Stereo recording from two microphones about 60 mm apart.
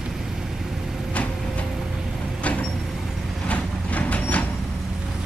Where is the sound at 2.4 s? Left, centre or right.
Left.